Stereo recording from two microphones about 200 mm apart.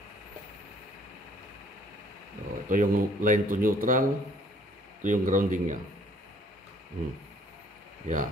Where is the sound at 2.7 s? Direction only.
40° right (ahead or behind).